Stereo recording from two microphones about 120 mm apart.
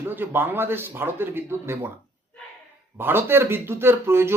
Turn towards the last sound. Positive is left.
turn(degrees=-20)  # may be behind; listen again after turning